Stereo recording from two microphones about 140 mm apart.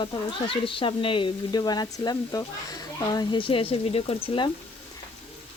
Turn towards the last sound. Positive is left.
turn(degrees=40)  # may be behind; listen again after turning